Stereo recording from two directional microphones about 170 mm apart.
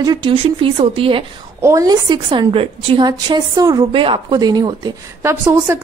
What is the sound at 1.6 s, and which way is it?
A woman's voice, 20° right (ahead or behind).